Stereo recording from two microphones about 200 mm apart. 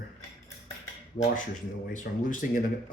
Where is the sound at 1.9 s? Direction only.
40° left (ahead or behind).